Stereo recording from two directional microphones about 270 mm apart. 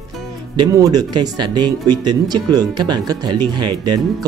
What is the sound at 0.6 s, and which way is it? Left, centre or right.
Speech, centre.